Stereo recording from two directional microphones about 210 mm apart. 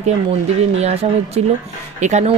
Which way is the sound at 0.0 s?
30° right (ahead or behind).